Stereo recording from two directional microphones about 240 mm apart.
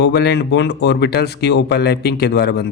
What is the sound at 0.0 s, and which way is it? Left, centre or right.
Speech, left.